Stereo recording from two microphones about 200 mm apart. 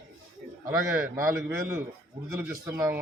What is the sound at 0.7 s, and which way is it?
A man's voice, 15° right (ahead or behind).